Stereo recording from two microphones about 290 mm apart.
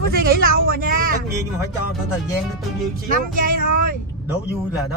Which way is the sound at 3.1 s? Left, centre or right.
Right.